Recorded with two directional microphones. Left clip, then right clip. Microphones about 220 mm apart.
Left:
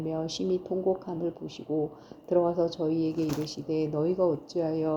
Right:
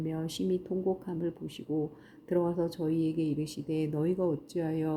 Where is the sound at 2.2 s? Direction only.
35° right (ahead or behind).